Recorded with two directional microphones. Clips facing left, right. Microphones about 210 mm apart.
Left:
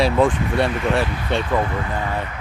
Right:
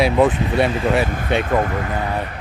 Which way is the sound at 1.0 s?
50° right (ahead or behind).